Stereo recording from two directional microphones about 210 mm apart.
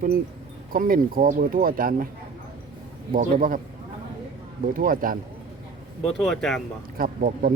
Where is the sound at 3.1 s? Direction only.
40° right (ahead or behind).